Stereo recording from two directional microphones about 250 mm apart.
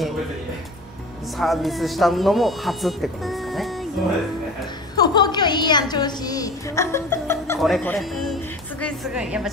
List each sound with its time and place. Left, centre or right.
1.4 s speech: centre
4.9 s a sound: centre
7.6 s speech: centre